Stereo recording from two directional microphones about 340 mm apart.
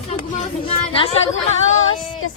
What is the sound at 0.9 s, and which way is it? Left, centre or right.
Speech, centre.